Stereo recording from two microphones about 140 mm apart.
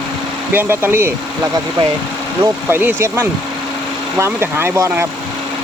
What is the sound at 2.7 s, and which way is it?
Speech, 15° right (ahead or behind).